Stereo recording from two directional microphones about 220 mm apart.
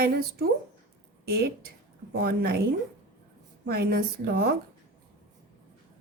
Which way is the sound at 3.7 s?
45° right (ahead or behind).